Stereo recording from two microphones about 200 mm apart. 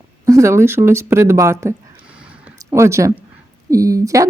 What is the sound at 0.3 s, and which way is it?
Speech, 15° right (ahead or behind).